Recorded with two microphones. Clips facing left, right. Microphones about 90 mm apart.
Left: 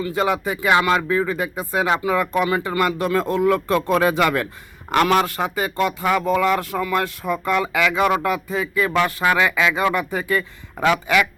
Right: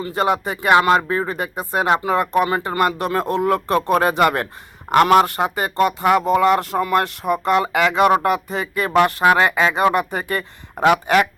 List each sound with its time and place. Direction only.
0.1 s speech: 55° right (ahead or behind)
0.8 s speech: 35° right (ahead or behind); by 10.9 s 55° right (ahead or behind)